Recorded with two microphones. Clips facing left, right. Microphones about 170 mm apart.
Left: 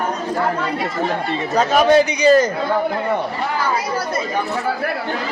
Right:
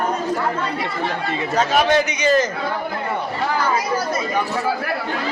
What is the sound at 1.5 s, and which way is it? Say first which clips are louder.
Speech: left 4 dB; 40° left (ahead or behind).